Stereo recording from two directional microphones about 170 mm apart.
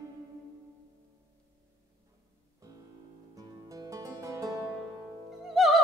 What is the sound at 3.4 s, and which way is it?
Music, 20° right (ahead or behind).